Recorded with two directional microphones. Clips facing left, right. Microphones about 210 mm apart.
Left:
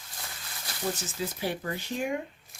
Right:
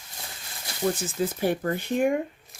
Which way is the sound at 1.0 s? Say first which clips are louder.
Right 7 dB; 50° right (ahead or behind).